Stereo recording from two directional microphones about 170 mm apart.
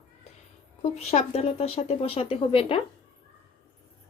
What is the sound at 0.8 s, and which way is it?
Speech, 40° left (ahead or behind).